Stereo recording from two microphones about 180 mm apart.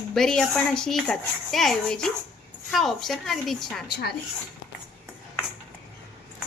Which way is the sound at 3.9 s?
65° left (ahead or behind).